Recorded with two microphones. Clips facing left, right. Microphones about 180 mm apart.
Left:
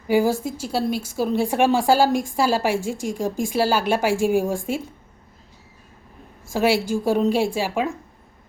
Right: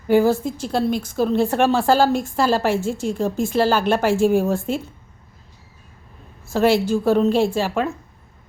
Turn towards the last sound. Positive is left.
turn(degrees=10)  # may be behind; listen again after turning